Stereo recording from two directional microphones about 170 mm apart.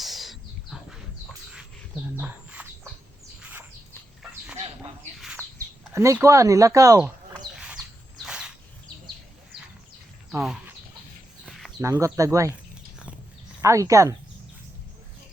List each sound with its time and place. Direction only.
0.0 s bird: centre (ahead or behind)
2.1 s bird: 10° right (ahead or behind)
5.2 s bird: centre (ahead or behind)
5.9 s speech: 15° right (ahead or behind)
7.6 s a sound: 5° right (ahead or behind)
11.4 s a sound: centre (ahead or behind)
11.8 s speech: 20° right (ahead or behind)
13.6 s speech: 20° right (ahead or behind)